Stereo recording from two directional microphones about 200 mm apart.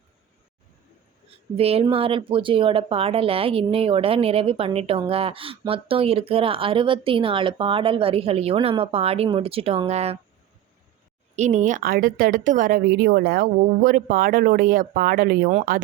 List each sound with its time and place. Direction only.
1.5 s speech: 30° right (ahead or behind)
11.3 s a woman's voice: 35° right (ahead or behind)